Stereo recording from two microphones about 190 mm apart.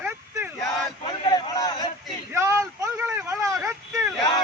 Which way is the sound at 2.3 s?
15° right (ahead or behind).